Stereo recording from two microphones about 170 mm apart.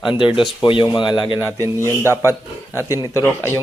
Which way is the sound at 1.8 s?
15° left (ahead or behind).